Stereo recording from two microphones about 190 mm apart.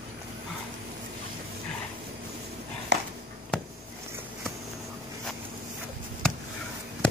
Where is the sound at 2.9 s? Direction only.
65° right (ahead or behind).